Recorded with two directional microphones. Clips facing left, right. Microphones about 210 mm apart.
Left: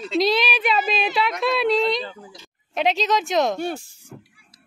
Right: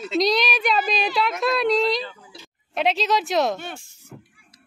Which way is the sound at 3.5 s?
40° left (ahead or behind).